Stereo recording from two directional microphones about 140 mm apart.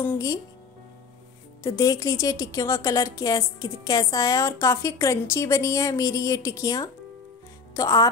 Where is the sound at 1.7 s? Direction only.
25° left (ahead or behind).